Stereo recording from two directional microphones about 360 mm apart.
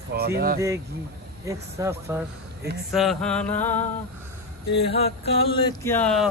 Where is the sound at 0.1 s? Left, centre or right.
Right.